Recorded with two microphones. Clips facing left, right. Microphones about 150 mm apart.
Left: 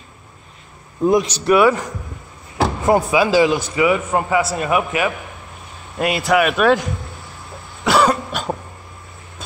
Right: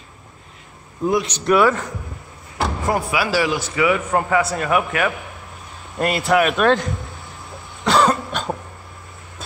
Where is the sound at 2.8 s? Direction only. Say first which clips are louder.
Left 7 dB; 20° left (ahead or behind).